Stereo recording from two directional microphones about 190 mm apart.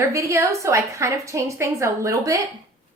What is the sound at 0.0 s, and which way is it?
A woman's voice, 15° right (ahead or behind).